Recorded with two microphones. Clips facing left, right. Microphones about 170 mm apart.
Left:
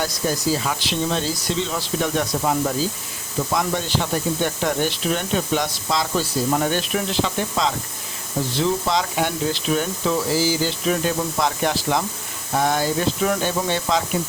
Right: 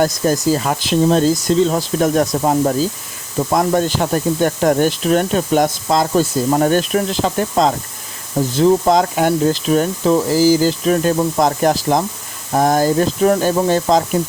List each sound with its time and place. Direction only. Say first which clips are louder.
0.0 s speech: right 8 dB; 45° right (ahead or behind)